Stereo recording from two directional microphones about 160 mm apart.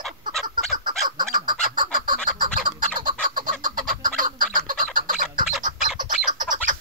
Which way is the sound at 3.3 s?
60° right (ahead or behind).